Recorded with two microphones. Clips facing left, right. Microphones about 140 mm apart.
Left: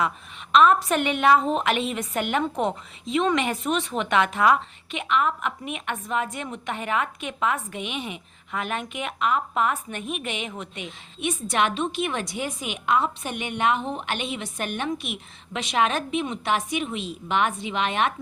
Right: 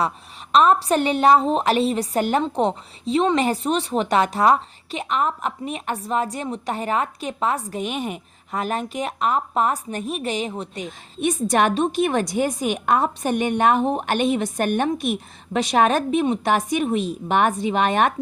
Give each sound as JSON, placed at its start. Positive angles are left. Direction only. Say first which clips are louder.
{"t": 0.5, "sound": "a woman's voice", "louder": "right 2 dB", "side_deg": -35}